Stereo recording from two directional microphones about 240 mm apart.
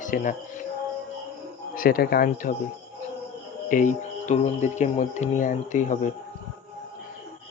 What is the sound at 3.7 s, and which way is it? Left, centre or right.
Speech, left.